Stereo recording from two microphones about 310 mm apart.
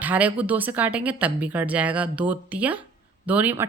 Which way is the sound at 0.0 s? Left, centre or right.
Centre.